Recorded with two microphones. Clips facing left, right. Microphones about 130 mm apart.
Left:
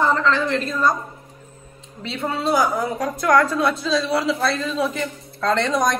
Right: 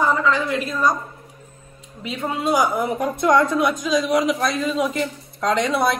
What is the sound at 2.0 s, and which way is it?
A woman's voice, 15° right (ahead or behind).